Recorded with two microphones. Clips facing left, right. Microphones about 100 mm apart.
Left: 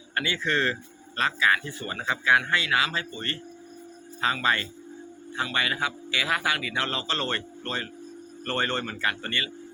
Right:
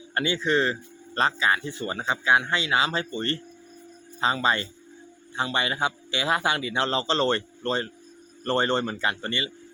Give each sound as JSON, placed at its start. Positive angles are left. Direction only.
{"t": 0.1, "sound": "a man's voice", "side_deg": -25}
{"t": 1.1, "sound": "a man's voice", "side_deg": -30}